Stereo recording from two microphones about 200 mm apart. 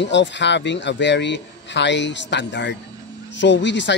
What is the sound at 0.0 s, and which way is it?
A man's voice, 65° left (ahead or behind).